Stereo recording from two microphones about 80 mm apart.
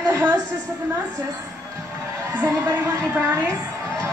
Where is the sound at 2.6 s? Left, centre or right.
Right.